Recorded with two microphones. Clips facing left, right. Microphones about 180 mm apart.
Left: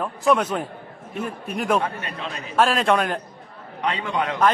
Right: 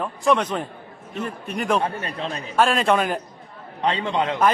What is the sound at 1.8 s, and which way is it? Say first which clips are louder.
Speech: right 2 dB; 30° right (ahead or behind).